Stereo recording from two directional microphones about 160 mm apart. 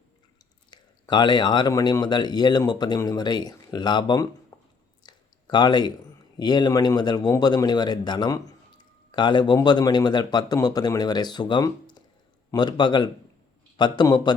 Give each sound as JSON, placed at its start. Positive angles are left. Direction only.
{"t": 0.7, "sound": "a man's voice", "side_deg": 30}
{"t": 4.5, "sound": "squish", "side_deg": 20}
{"t": 5.0, "sound": "a sound", "side_deg": 25}
{"t": 6.3, "sound": "a man's voice", "side_deg": 25}